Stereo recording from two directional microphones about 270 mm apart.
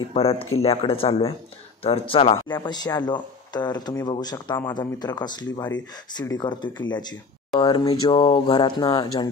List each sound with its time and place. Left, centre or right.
0.1 s speech: left